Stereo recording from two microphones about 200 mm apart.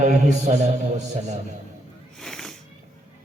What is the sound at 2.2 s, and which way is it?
Cat, centre (ahead or behind).